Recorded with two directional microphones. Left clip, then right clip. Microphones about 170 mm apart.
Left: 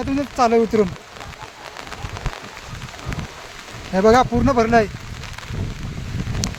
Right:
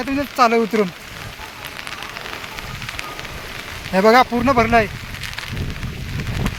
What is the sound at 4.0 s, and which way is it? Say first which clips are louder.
Speech: right 2 dB; 10° left (ahead or behind).